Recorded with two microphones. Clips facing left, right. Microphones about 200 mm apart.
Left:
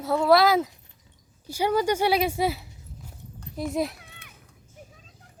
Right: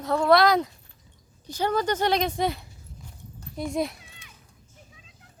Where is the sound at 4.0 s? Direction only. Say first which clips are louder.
Left 2 dB; 60° left (ahead or behind).